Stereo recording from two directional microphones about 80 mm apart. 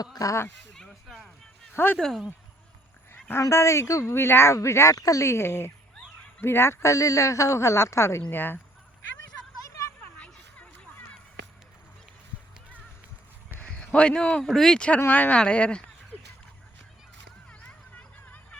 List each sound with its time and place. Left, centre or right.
0.0 s speech: left
0.7 s chop: centre
1.7 s speech: left
2.0 s speech: centre
3.5 s speech: left
10.2 s a sound: centre
13.6 s speech: centre